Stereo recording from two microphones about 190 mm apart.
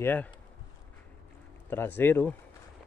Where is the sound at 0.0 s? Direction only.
10° left (ahead or behind).